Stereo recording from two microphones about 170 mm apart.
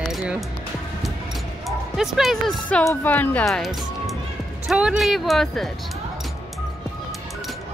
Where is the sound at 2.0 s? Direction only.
Centre (ahead or behind).